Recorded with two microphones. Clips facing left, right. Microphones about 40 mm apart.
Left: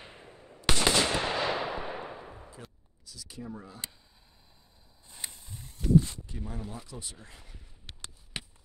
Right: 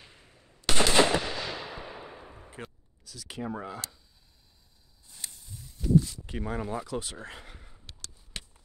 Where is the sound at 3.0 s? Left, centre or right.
Right.